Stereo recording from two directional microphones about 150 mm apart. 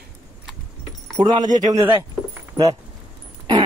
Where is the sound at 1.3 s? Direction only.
25° right (ahead or behind).